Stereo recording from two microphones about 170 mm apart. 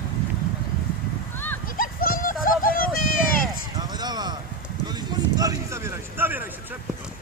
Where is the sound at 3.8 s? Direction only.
25° right (ahead or behind).